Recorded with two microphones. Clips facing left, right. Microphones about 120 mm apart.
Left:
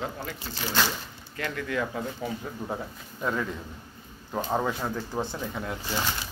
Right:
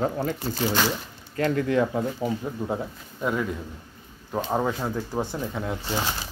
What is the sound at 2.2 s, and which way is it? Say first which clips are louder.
Speech: right 5 dB; 15° right (ahead or behind).